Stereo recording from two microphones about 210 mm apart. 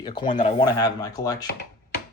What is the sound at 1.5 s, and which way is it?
Chopping, 50° left (ahead or behind).